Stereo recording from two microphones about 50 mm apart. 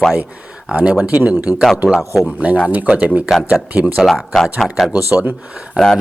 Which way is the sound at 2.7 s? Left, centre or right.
Right.